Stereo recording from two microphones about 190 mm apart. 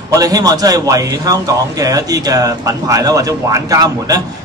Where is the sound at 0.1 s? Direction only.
20° right (ahead or behind).